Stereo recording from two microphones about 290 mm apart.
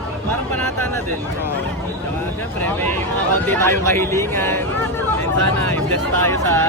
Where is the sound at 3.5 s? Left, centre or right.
Centre.